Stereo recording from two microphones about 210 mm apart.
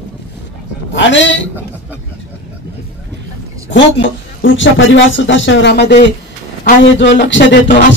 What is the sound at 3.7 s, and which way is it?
A man's voice, 60° left (ahead or behind).